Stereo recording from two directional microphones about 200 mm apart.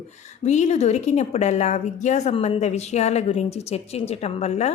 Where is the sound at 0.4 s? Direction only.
35° left (ahead or behind).